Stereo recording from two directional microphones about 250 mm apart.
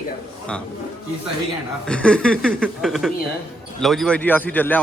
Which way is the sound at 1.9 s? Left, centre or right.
Centre.